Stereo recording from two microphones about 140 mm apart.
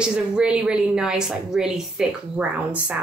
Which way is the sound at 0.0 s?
5° right (ahead or behind).